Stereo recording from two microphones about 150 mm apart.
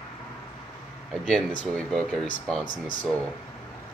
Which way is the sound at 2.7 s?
65° left (ahead or behind).